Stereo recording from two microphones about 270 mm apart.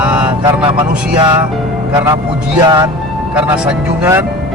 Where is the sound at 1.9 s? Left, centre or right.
Centre.